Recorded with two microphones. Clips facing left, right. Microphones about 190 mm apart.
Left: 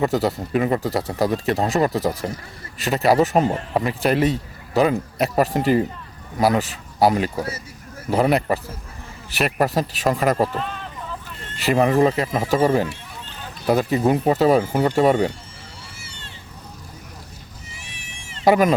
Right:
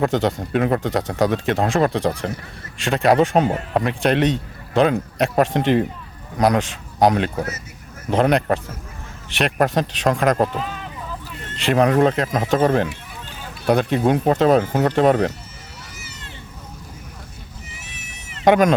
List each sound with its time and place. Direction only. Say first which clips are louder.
0.0 s speech: right 1 dB; 5° left (ahead or behind)
16.0 s a sound: right 2 dB; 30° left (ahead or behind)
17.9 s goat: right 1 dB; 30° left (ahead or behind)
18.4 s speech: right 1 dB; 5° left (ahead or behind)